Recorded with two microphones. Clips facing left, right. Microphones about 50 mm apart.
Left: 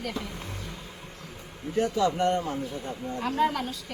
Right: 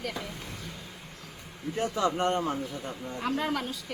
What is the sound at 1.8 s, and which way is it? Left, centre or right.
Speech, right.